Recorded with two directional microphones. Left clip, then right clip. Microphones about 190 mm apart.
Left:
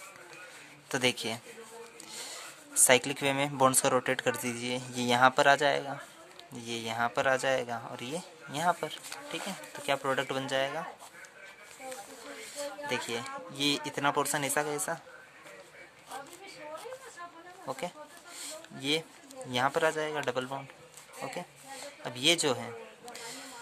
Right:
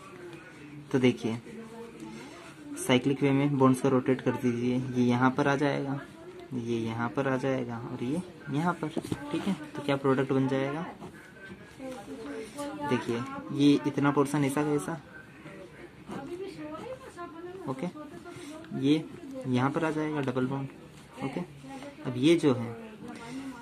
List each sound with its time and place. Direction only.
0.9 s speech: 50° left (ahead or behind)
2.9 s speech: 60° left (ahead or behind)
12.8 s speech: 45° left (ahead or behind)
17.6 s speech: 50° left (ahead or behind)
22.0 s speech: 50° left (ahead or behind)